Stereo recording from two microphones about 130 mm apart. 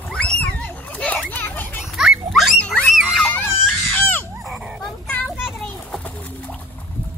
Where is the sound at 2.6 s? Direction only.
10° left (ahead or behind).